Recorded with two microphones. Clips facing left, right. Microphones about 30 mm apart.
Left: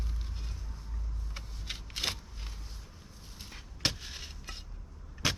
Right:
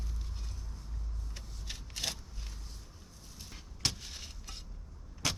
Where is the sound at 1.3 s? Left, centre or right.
Left.